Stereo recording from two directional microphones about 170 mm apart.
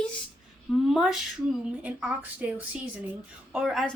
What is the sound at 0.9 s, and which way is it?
A woman's voice, centre (ahead or behind).